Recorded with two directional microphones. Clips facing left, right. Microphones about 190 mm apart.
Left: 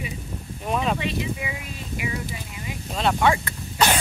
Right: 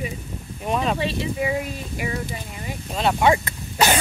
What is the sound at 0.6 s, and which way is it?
Speech, centre (ahead or behind).